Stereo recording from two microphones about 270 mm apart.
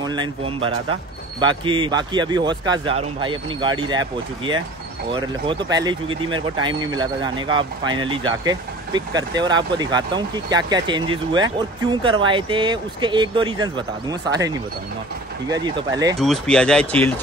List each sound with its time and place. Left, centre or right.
0.0 s speech: centre
15.5 s speech: centre
16.2 s speech: centre